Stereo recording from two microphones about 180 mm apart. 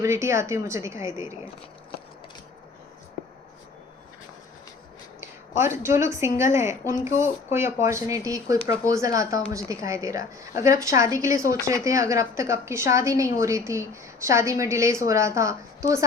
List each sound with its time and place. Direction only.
0.0 s a woman's voice: 15° right (ahead or behind)
5.2 s a sound: 15° right (ahead or behind)
6.1 s a woman's voice: 15° right (ahead or behind)